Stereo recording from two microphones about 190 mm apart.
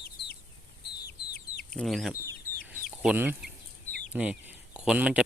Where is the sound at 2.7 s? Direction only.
10° right (ahead or behind).